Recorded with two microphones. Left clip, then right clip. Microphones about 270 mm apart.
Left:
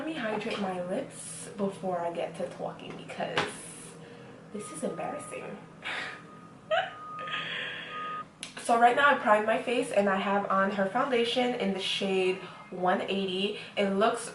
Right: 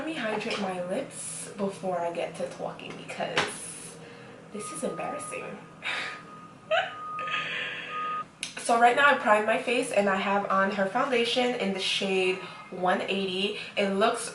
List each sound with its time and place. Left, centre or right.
0.0 s speech: centre
4.9 s speech: centre
6.7 s a sound: centre